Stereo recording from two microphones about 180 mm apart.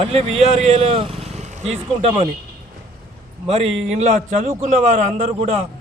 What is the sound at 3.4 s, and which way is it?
A man's voice, 35° right (ahead or behind).